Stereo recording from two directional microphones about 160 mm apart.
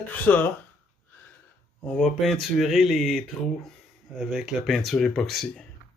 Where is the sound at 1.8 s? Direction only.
5° left (ahead or behind).